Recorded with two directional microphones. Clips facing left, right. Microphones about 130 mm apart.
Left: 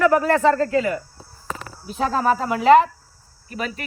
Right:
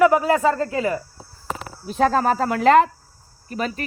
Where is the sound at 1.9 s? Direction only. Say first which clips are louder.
Right 2 dB; 50° right (ahead or behind).